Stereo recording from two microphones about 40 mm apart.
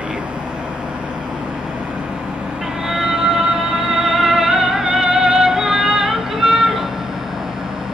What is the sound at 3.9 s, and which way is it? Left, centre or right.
Music, centre.